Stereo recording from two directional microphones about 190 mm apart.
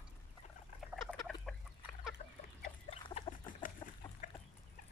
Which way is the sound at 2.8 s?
30° left (ahead or behind).